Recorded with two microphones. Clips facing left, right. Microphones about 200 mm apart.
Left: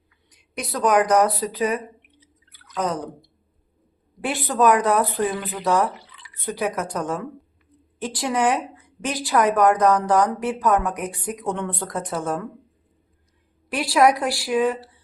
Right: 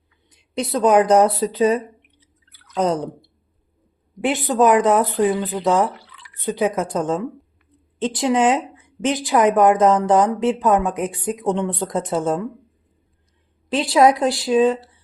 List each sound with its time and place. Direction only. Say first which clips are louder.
0.3 s a woman's voice: right 7 dB; 25° right (ahead or behind)
13.7 s a woman's voice: right 3 dB; 20° right (ahead or behind)